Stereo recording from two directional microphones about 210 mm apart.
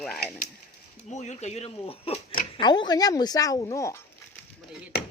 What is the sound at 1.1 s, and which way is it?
Speech, 35° left (ahead or behind).